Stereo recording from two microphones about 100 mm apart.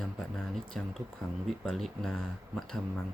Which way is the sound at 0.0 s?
5° left (ahead or behind).